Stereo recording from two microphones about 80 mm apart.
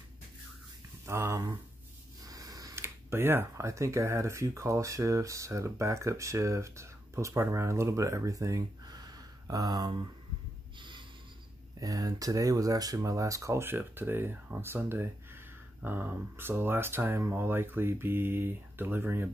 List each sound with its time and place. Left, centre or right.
1.0 s speech: right
2.2 s a sound: right
2.7 s speech: right
10.8 s snort: right
11.8 s speech: right